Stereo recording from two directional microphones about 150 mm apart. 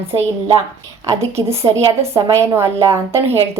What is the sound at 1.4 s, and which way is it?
Speech, 20° right (ahead or behind).